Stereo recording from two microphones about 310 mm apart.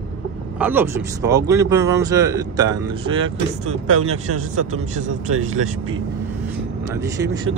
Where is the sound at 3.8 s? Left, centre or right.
Right.